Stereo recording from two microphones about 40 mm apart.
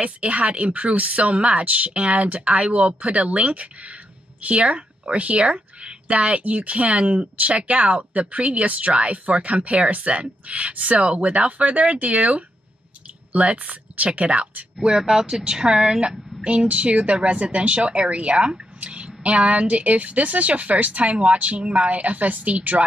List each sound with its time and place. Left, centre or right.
0.0 s a woman's voice: right
14.8 s speech: centre
15.4 s a woman's voice: right
16.4 s a woman's voice: right